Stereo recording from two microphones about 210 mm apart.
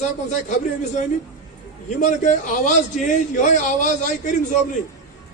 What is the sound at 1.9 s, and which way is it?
A man's voice, 35° left (ahead or behind).